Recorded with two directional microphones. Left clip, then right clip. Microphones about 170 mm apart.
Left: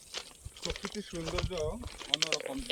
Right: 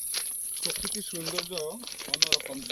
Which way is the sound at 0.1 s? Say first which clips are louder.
Right 6 dB; centre (ahead or behind).